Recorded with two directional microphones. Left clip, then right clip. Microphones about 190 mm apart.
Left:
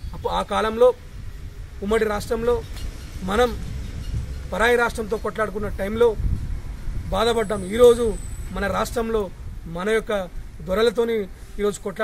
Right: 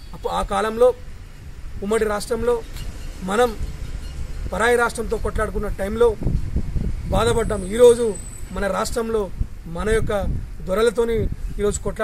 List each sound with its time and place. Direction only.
0.2 s a man's voice: centre (ahead or behind)